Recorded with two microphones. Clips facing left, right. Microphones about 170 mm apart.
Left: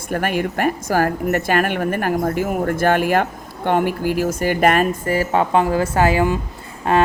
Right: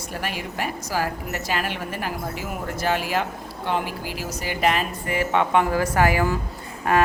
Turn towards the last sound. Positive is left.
turn(degrees=30)  # may be behind; listen again after turning